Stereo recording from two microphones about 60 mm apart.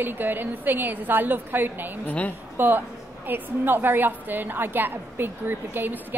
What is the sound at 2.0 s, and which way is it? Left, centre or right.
Speech, left.